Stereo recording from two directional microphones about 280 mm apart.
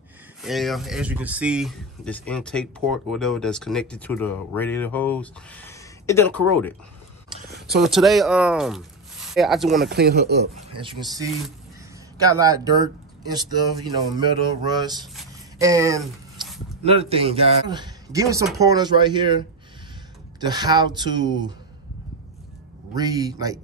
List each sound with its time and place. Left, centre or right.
0.4 s speech: centre
7.8 s speech: centre
9.8 s speech: right
10.8 s speech: centre
12.3 s speech: centre
16.0 s a sound: centre
16.8 s speech: right
22.9 s speech: centre